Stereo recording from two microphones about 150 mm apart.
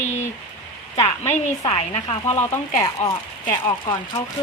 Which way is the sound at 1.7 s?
40° left (ahead or behind).